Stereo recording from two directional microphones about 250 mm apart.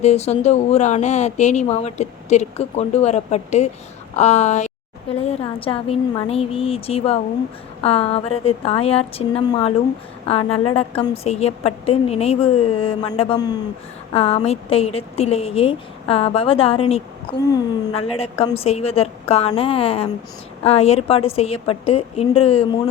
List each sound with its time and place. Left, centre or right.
0.0 s speech: left